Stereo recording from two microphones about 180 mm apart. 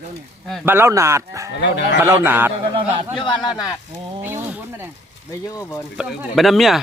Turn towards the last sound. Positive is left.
turn(degrees=0)  # may be behind; listen again after turning